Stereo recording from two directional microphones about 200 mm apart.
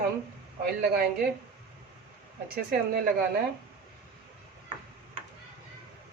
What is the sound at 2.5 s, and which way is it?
Speech, 50° right (ahead or behind).